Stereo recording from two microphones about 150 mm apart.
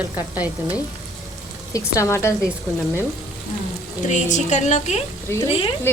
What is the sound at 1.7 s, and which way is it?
Speech, 20° left (ahead or behind).